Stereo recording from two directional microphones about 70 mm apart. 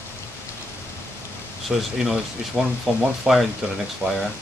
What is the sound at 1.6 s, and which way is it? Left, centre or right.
Speech, centre.